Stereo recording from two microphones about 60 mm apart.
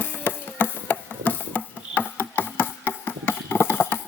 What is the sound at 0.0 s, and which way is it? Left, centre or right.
Music, left.